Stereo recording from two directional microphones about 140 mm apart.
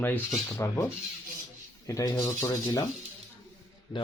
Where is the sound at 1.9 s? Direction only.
25° left (ahead or behind).